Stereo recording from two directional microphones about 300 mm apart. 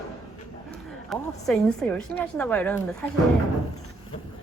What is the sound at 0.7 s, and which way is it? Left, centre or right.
A woman's voice, centre.